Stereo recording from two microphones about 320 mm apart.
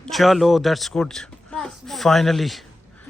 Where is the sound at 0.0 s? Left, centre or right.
Centre.